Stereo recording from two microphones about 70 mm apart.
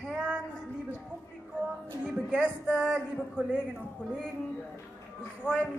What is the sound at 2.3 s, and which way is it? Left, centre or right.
Speech, centre.